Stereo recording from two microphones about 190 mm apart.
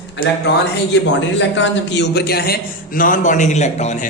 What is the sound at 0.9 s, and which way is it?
A man's voice, 70° left (ahead or behind).